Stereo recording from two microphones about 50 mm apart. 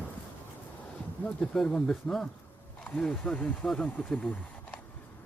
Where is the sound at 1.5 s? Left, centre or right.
Centre; by 4.2 s left.